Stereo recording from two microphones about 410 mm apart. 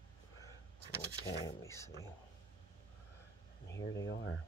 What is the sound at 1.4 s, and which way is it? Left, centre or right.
Speech, centre.